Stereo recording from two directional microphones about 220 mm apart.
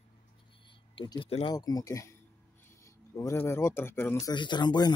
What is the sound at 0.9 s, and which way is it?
Speech, 20° left (ahead or behind).